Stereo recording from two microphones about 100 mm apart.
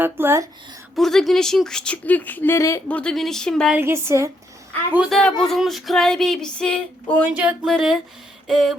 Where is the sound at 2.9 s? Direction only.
10° left (ahead or behind).